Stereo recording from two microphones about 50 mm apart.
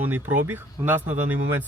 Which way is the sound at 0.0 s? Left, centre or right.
Right.